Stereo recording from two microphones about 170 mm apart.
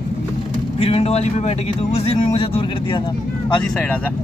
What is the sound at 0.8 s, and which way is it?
Speech, 35° left (ahead or behind).